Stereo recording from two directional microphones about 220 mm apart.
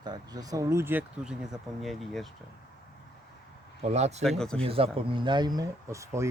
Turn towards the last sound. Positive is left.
turn(degrees=-15)  # may be behind; listen again after turning